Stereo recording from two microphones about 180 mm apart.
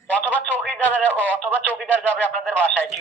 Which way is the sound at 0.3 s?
10° left (ahead or behind).